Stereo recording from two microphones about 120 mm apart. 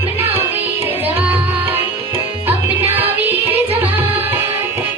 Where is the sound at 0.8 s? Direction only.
15° right (ahead or behind).